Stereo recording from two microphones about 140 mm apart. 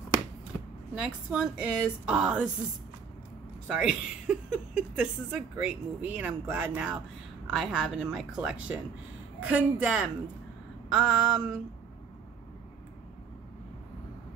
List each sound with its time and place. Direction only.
0.9 s a woman's voice: 5° right (ahead or behind)
3.6 s a woman's voice: 5° right (ahead or behind)